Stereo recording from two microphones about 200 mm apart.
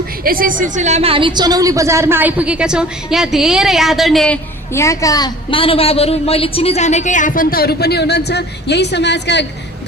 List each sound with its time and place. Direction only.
0.3 s a woman's voice: 45° right (ahead or behind); by 4.4 s centre (ahead or behind)
4.7 s a woman's voice: 15° left (ahead or behind); by 9.5 s 60° left (ahead or behind)